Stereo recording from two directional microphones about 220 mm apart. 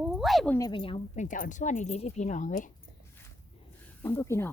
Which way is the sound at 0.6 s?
20° left (ahead or behind).